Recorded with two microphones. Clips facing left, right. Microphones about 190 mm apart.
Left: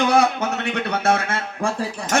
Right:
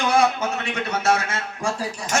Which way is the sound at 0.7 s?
60° left (ahead or behind).